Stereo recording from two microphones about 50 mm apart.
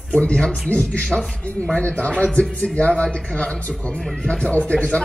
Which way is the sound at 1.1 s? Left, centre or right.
Centre.